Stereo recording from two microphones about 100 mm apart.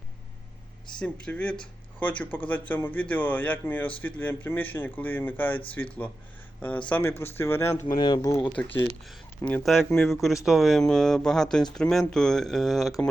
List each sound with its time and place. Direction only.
0.9 s speech: 10° left (ahead or behind); by 7.9 s 25° left (ahead or behind)
7.9 s speech: 45° left (ahead or behind)
8.4 s speech: 20° left (ahead or behind)
9.6 s speech: centre (ahead or behind)